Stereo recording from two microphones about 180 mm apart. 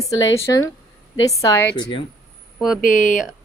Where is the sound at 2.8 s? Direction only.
45° left (ahead or behind).